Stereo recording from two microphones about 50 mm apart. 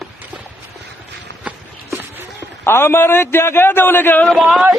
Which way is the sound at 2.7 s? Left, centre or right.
Left.